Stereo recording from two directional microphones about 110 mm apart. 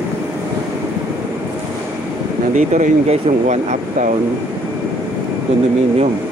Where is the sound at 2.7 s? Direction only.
90° right.